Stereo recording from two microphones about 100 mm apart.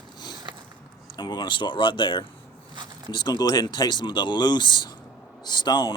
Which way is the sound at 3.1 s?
45° left (ahead or behind).